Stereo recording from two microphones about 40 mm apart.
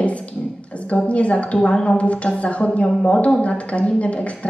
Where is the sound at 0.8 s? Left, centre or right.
Left.